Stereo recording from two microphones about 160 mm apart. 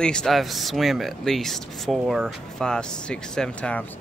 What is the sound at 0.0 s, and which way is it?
Speech, 5° left (ahead or behind).